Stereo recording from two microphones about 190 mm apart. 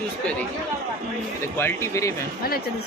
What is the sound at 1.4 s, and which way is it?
Speech, 15° left (ahead or behind).